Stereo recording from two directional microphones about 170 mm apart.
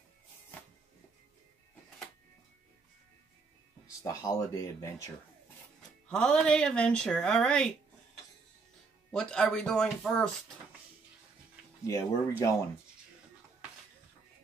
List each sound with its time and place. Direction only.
4.0 s speech: 15° left (ahead or behind)
5.8 s speech: 5° left (ahead or behind)
9.1 s speech: 5° left (ahead or behind)
11.8 s speech: 15° left (ahead or behind)